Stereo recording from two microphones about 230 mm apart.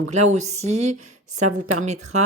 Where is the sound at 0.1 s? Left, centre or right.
Right.